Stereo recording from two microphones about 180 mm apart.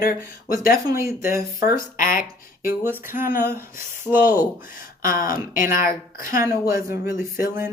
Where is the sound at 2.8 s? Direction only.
10° right (ahead or behind).